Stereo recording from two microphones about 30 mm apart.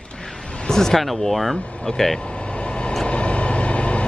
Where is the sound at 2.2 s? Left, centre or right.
Left.